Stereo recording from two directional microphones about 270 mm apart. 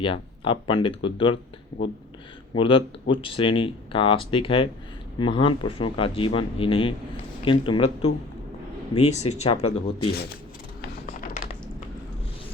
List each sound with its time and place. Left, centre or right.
0.0 s speech: centre
2.6 s speech: centre
9.0 s speech: left
10.8 s music: left